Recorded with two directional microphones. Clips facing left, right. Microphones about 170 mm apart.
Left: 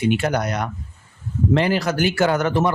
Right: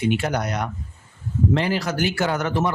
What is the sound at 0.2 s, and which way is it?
Speech, 60° left (ahead or behind).